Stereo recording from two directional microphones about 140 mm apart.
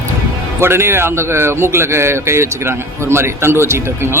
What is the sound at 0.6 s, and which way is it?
A man's voice, 15° right (ahead or behind).